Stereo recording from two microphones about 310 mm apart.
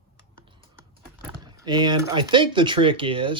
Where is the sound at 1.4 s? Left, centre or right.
Centre.